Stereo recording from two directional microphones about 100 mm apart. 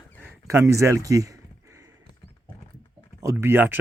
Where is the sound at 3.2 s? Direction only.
20° right (ahead or behind).